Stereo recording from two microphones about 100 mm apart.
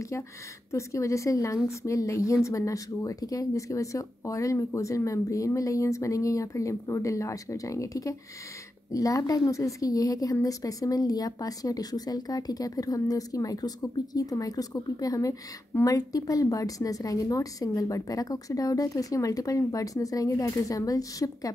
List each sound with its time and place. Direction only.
0.7 s a woman's voice: 30° left (ahead or behind)